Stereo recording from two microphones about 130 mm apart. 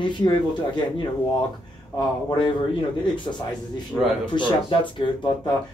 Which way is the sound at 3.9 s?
5° left (ahead or behind).